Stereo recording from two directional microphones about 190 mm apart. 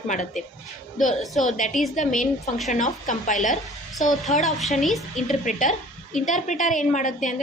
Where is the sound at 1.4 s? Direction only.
40° left (ahead or behind).